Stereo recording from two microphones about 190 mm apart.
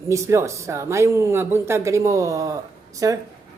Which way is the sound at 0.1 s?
15° right (ahead or behind).